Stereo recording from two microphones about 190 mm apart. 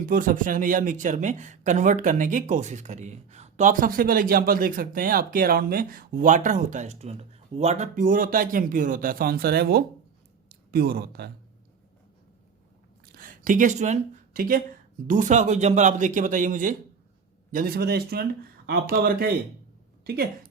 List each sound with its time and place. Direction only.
0.1 s speech: 45° right (ahead or behind)
13.1 s a man's voice: 45° right (ahead or behind)